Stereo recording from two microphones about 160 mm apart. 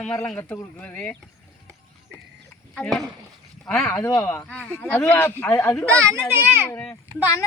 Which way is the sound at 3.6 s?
5° left (ahead or behind).